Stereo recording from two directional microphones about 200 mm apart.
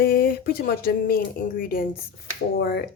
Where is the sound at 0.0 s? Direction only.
45° left (ahead or behind).